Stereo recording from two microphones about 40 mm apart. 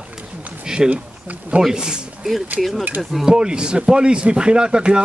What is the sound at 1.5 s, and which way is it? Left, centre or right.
Speech, right.